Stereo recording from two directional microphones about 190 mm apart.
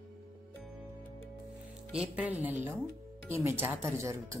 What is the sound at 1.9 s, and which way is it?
Speech, 5° right (ahead or behind).